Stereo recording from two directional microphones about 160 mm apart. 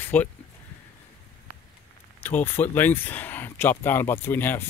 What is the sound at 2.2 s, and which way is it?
Speech, 10° left (ahead or behind).